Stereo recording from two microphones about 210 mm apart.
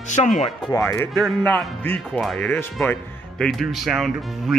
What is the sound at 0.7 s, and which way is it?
A man's voice, 15° left (ahead or behind).